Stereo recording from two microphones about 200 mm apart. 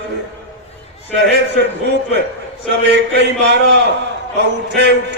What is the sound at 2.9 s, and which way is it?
Speech, 60° right (ahead or behind).